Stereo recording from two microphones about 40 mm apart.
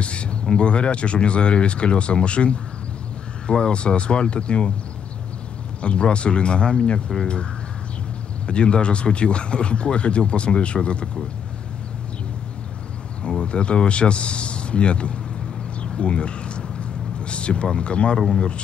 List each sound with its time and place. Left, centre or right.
0.0 s a sound: left
0.5 s speech: left
5.8 s speech: left
8.5 s speech: left
13.4 s speech: left
15.8 s a sound: left
17.3 s speech: left